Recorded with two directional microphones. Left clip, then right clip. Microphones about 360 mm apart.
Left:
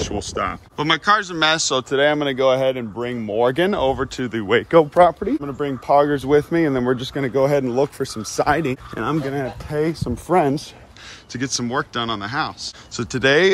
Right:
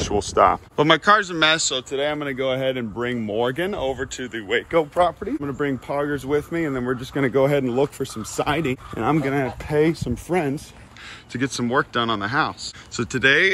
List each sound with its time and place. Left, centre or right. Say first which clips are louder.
0.0 s speech: right 6 dB; centre; by 2.3 s left
2.3 s speech: left 6 dB; centre
3.5 s a man's voice: left 6 dB; left
5.4 s speech: even; centre
5.9 s a man's voice: left 13 dB; left
7.2 s speech: even; centre